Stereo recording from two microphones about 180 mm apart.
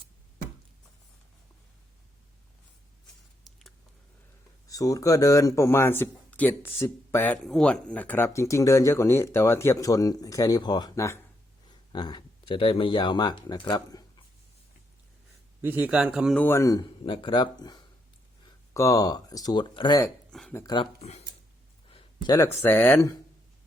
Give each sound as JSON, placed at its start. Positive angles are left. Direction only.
{"t": 3.5, "sound": "a sound", "side_deg": 0}
{"t": 4.6, "sound": "speech", "side_deg": 20}
{"t": 15.6, "sound": "speech", "side_deg": -10}
{"t": 16.4, "sound": "speech", "side_deg": 15}
{"t": 20.5, "sound": "speech", "side_deg": 15}
{"t": 20.7, "sound": "speech", "side_deg": 35}
{"t": 21.8, "sound": "a sound", "side_deg": 25}
{"t": 22.6, "sound": "speech", "side_deg": 15}